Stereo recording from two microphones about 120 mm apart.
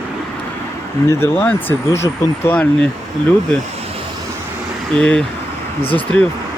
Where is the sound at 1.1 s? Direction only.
15° left (ahead or behind).